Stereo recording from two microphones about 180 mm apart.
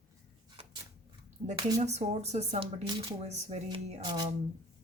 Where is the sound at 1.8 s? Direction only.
40° right (ahead or behind).